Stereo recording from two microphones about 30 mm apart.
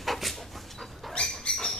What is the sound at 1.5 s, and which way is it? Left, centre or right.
Bird, left.